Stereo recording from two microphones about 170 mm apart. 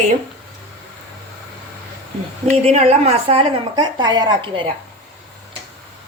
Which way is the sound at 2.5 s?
40° right (ahead or behind).